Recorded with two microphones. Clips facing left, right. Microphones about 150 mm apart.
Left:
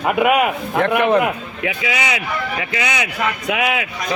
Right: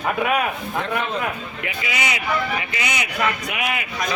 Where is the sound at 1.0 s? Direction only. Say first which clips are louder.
Left 14 dB; 65° left (ahead or behind).